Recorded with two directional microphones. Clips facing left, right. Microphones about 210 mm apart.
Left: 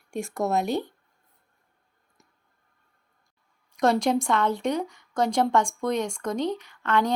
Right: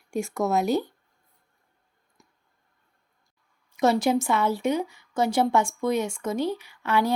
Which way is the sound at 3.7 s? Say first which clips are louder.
Right 1 dB; 5° right (ahead or behind).